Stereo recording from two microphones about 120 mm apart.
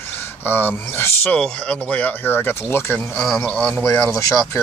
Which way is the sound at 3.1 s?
5° left (ahead or behind).